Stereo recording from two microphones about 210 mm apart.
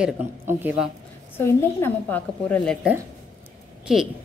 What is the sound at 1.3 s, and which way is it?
A woman's voice, 10° left (ahead or behind).